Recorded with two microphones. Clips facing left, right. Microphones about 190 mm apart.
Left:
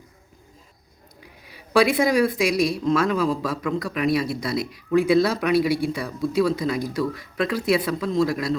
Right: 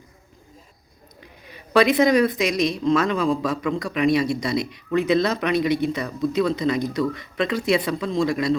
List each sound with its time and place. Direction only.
1.2 s speech: 10° left (ahead or behind)